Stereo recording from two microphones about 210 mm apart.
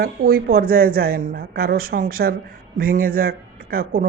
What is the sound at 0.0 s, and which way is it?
Speech, 45° right (ahead or behind).